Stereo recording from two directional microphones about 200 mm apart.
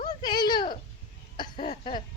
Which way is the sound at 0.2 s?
20° left (ahead or behind).